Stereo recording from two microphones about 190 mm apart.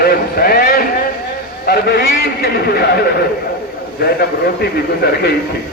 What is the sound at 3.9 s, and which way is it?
Speech, 55° left (ahead or behind).